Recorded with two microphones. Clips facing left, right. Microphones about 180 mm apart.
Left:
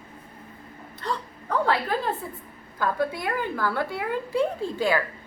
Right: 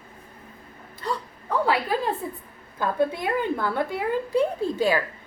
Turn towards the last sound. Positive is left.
turn(degrees=-15)  # may be behind; listen again after turning